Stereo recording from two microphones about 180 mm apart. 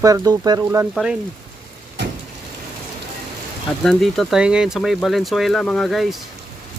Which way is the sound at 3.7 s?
Centre (ahead or behind).